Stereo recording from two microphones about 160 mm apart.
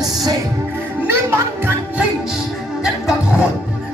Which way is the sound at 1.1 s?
15° right (ahead or behind).